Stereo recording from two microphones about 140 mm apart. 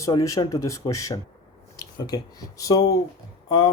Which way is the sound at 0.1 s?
25° left (ahead or behind).